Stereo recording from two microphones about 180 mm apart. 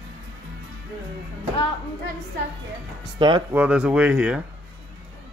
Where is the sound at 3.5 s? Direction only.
10° right (ahead or behind).